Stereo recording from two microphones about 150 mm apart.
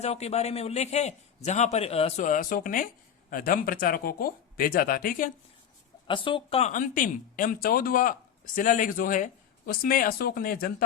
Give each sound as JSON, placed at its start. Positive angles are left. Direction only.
{"t": 0.0, "sound": "a man's voice", "side_deg": 45}
{"t": 2.2, "sound": "speech", "side_deg": 60}
{"t": 6.1, "sound": "speech", "side_deg": 35}
{"t": 6.7, "sound": "speech", "side_deg": 60}
{"t": 8.5, "sound": "speech", "side_deg": 60}